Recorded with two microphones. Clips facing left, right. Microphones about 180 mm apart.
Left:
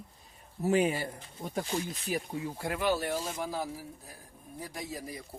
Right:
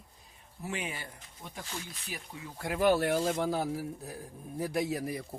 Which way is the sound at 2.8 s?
60° right (ahead or behind).